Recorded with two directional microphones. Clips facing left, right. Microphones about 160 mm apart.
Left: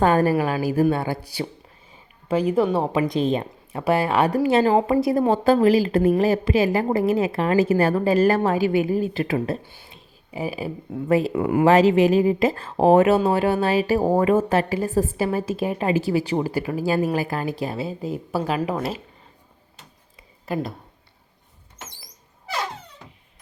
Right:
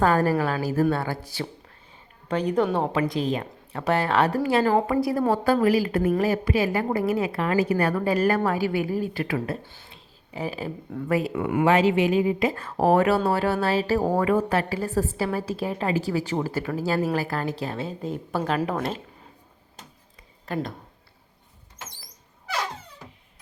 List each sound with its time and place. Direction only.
0.0 s speech: 20° left (ahead or behind)
2.2 s speech: 5° left (ahead or behind)
2.9 s a woman's voice: 20° left (ahead or behind)
9.6 s speech: 15° left (ahead or behind)
11.1 s speech: 30° left (ahead or behind); by 19.0 s 5° left (ahead or behind)
20.4 s speech: 5° left (ahead or behind)